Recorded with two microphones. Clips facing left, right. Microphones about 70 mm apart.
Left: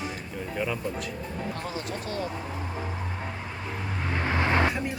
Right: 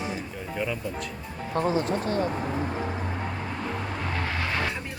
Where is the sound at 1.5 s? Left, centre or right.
Right.